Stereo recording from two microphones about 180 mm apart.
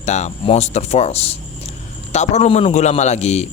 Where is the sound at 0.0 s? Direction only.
40° left (ahead or behind).